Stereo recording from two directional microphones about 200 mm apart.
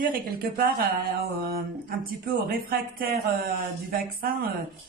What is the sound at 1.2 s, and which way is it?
Speech, 50° right (ahead or behind).